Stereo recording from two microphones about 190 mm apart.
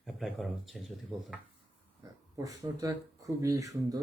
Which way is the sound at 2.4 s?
15° right (ahead or behind).